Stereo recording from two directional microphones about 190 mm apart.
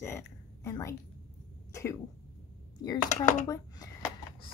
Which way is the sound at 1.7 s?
15° left (ahead or behind).